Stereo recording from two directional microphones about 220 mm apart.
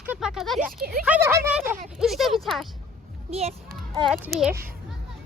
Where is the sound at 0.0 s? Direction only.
5° right (ahead or behind).